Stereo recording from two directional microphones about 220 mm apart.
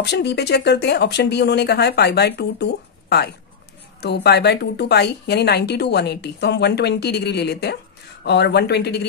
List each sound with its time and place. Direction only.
0.0 s a woman's voice: 50° left (ahead or behind)